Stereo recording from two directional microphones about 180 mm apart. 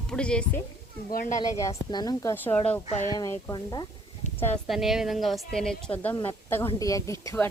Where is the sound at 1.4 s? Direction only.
20° left (ahead or behind).